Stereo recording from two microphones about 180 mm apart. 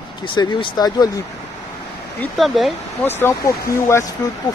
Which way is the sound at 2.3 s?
Centre (ahead or behind).